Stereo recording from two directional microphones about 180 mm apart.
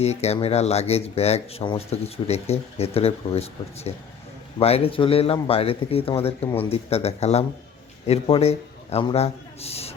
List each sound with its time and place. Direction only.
0.0 s a man's voice: 35° left (ahead or behind)